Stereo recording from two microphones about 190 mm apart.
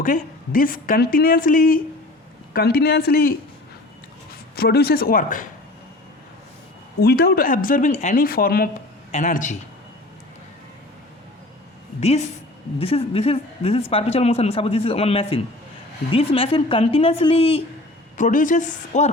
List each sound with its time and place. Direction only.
0.0 s a woman's voice: 45° left (ahead or behind)
7.0 s a woman's voice: 55° left (ahead or behind)
11.9 s a man's voice: 35° left (ahead or behind)
18.2 s a man's voice: 45° left (ahead or behind)